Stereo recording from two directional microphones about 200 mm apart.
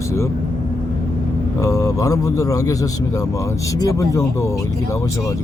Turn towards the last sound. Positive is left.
turn(degrees=15)  # may be behind; listen again after turning